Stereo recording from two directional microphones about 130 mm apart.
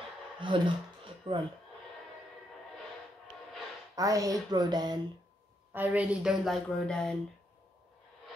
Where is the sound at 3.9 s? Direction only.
25° right (ahead or behind).